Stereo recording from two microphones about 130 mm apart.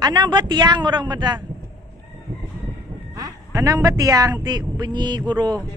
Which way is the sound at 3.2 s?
25° right (ahead or behind).